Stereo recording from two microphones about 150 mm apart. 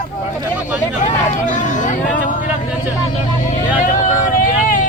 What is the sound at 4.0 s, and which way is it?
Vehicle, 55° left (ahead or behind).